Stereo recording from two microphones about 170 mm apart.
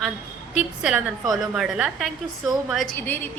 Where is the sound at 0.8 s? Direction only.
5° right (ahead or behind).